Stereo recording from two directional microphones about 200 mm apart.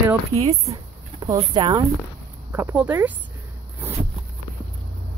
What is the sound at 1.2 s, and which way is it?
Speech, 20° right (ahead or behind).